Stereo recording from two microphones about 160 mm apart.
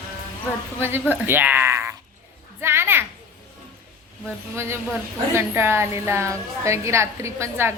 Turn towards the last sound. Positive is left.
turn(degrees=-15)  # may be behind; listen again after turning